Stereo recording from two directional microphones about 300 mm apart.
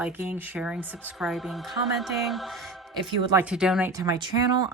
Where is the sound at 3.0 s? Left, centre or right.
Centre.